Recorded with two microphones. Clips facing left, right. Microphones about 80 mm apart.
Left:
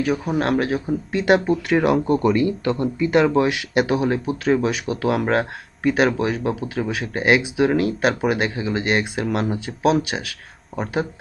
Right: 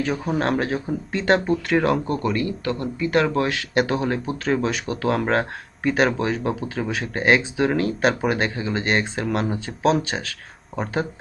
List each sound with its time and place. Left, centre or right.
0.0 s a man's voice: centre